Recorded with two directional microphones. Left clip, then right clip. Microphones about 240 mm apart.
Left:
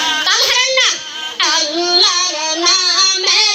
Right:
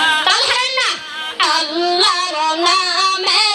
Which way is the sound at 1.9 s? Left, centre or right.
Right.